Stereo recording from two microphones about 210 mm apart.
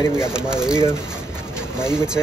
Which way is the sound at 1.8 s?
5° right (ahead or behind).